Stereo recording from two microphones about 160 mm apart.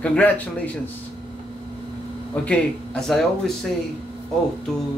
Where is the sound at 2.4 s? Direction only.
5° left (ahead or behind).